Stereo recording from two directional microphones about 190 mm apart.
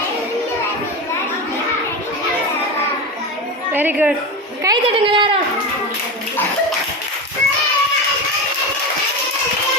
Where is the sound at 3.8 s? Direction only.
10° right (ahead or behind).